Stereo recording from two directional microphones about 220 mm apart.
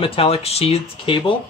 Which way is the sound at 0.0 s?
25° left (ahead or behind).